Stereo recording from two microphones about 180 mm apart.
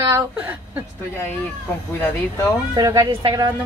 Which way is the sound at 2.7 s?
20° right (ahead or behind).